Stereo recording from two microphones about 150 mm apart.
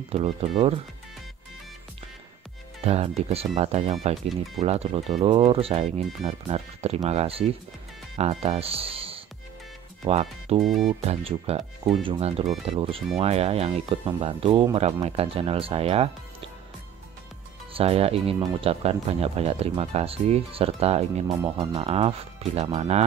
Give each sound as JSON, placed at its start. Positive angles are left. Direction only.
{"t": 0.1, "sound": "speech", "side_deg": -40}
{"t": 2.8, "sound": "speech", "side_deg": -45}
{"t": 10.6, "sound": "speech", "side_deg": 0}
{"t": 10.9, "sound": "speech", "side_deg": -40}
{"t": 17.7, "sound": "speech", "side_deg": -40}